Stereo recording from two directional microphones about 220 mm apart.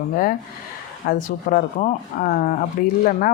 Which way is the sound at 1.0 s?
40° left (ahead or behind).